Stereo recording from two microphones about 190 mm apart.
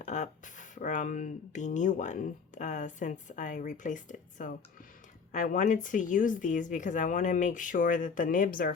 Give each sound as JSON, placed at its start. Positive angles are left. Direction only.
{"t": 0.0, "sound": "speech", "side_deg": 40}